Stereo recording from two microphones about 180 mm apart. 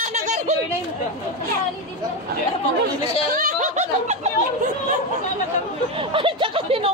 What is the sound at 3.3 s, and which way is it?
Snicker, 40° right (ahead or behind).